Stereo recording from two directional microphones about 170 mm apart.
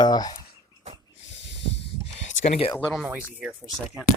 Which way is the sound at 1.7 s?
35° left (ahead or behind).